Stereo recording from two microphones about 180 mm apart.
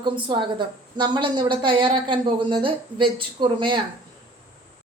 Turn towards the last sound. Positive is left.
turn(degrees=-25)  # may be behind; listen again after turning